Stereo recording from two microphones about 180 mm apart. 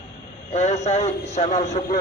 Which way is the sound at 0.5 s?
40° left (ahead or behind).